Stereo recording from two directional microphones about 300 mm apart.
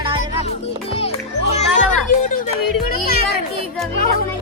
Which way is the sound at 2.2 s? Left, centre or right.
Left.